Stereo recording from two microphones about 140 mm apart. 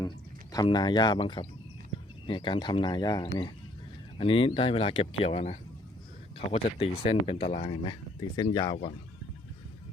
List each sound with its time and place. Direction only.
0.5 s speech: 30° left (ahead or behind)
4.2 s speech: 40° left (ahead or behind)
8.4 s speech: 30° left (ahead or behind)